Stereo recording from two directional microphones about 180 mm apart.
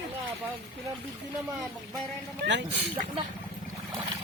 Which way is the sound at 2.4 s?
70° right (ahead or behind).